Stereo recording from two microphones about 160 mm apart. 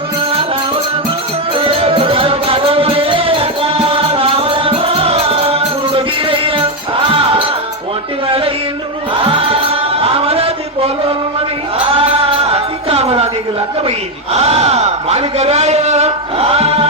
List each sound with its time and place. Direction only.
1.5 s music: 35° right (ahead or behind)
8.3 s a sound: 35° right (ahead or behind)
9.1 s music: 35° right (ahead or behind)
10.0 s a sound: 35° right (ahead or behind)
11.9 s music: 35° right (ahead or behind)
14.3 s a man's voice: 40° right (ahead or behind)